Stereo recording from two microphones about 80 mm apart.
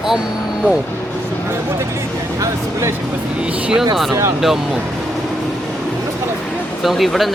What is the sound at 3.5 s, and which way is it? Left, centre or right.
Speech, centre.